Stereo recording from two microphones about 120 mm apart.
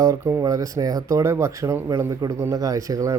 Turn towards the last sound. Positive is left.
turn(degrees=-25)  # may be behind; listen again after turning